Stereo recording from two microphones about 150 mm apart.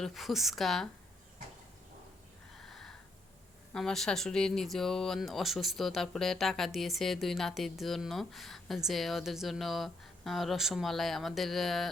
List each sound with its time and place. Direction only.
0.0 s speech: centre (ahead or behind)
2.6 s a sound: centre (ahead or behind)
3.7 s speech: 5° left (ahead or behind)